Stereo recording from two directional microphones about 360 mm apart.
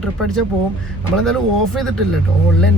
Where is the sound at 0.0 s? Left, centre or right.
Centre.